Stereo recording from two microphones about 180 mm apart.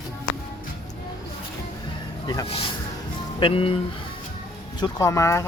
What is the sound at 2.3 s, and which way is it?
Speech, 25° left (ahead or behind).